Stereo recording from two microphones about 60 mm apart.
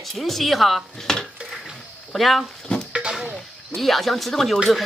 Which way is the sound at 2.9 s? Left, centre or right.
Centre.